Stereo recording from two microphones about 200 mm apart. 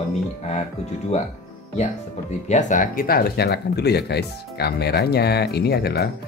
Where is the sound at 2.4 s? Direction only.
35° left (ahead or behind).